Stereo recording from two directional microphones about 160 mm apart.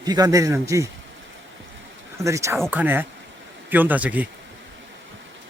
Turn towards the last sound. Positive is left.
turn(degrees=-10)  # may be behind; listen again after turning